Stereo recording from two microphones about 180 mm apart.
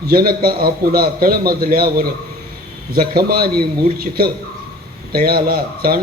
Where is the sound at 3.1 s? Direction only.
55° right (ahead or behind).